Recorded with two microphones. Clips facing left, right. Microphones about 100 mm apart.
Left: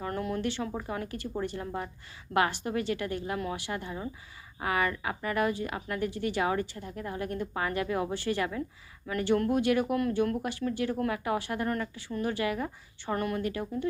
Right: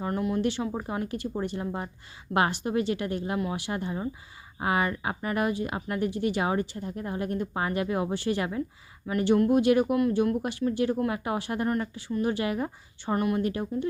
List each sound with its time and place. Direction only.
0.0 s speech: 15° right (ahead or behind)